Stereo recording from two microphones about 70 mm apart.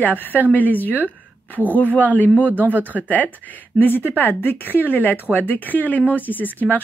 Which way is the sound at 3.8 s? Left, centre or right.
Left.